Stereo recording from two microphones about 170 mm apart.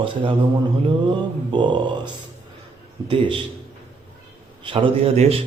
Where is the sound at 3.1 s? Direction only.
30° right (ahead or behind).